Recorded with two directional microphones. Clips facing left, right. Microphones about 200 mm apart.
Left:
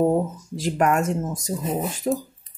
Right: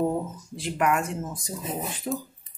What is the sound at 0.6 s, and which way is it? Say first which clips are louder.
Speech: left 4 dB; 45° left (ahead or behind).